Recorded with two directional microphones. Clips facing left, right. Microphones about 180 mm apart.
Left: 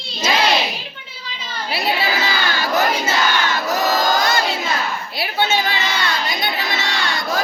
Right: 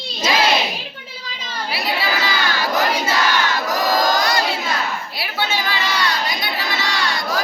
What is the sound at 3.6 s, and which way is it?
Battle cry, 25° left (ahead or behind).